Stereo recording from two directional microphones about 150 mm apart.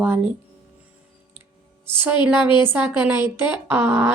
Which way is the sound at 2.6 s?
15° right (ahead or behind).